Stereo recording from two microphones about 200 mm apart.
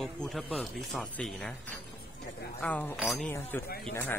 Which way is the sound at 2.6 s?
10° left (ahead or behind).